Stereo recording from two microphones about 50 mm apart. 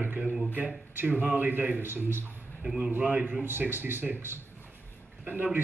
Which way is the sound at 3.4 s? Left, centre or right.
Right.